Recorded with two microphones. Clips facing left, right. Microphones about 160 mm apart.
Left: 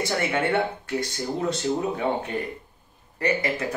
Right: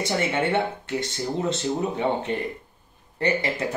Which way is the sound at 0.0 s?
20° right (ahead or behind).